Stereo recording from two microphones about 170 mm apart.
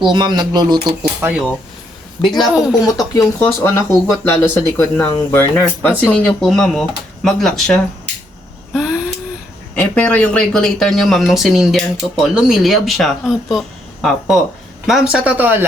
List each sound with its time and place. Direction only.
0.0 s speech: 25° right (ahead or behind)
1.2 s speech: 5° right (ahead or behind)
3.2 s speech: 15° left (ahead or behind)
8.7 s a sound: 5° right (ahead or behind)
9.7 s speech: 10° left (ahead or behind); by 15.6 s 10° right (ahead or behind)